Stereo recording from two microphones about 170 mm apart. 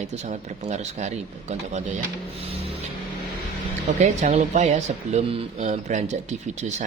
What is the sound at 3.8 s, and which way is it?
Speech, 40° right (ahead or behind).